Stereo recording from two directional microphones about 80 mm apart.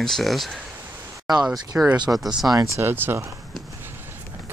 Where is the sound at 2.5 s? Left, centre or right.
Right.